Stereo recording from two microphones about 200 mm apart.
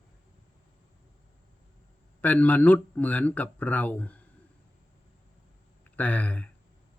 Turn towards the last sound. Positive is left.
turn(degrees=5)  # may be behind; listen again after turning